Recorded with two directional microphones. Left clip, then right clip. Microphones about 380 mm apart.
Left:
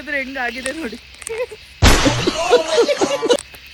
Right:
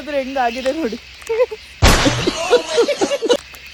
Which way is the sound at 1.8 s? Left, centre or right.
Centre.